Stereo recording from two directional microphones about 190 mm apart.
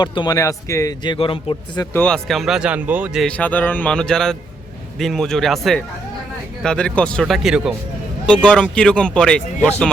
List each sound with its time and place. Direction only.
0.0 s a man's voice: 25° left (ahead or behind)
2.0 s speech: 5° left (ahead or behind)